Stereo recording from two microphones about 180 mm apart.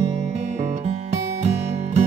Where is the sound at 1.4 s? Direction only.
35° right (ahead or behind).